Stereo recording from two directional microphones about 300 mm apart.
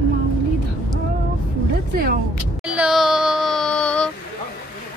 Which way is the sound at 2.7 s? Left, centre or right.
Centre.